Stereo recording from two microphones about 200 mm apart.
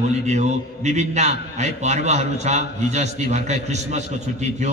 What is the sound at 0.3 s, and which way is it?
A man's voice, 35° right (ahead or behind).